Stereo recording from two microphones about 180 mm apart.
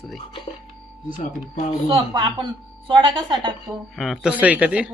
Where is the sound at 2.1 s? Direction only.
25° right (ahead or behind).